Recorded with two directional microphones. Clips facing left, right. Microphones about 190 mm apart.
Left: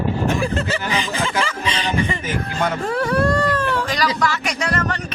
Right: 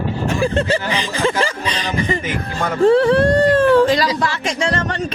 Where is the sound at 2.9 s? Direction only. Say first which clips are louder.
Right 7 dB; 25° right (ahead or behind).